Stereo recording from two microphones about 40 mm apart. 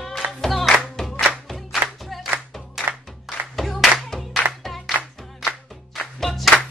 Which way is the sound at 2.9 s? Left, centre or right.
Right.